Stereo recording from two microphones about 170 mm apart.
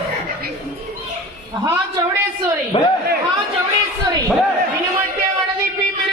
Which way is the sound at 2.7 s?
35° left (ahead or behind).